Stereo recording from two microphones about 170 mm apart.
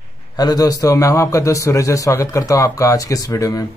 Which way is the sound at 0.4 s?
20° left (ahead or behind).